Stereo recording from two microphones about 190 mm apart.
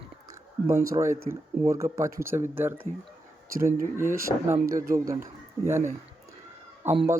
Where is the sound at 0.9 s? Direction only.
15° right (ahead or behind).